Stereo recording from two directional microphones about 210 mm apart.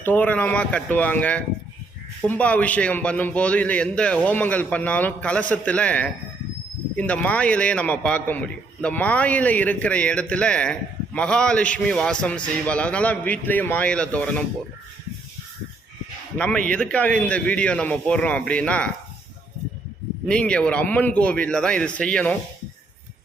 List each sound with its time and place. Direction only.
0.0 s a man's voice: 10° left (ahead or behind)
16.4 s a man's voice: 5° left (ahead or behind)
20.2 s a man's voice: 5° left (ahead or behind)